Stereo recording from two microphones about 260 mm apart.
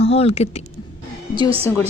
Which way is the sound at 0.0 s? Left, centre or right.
Left.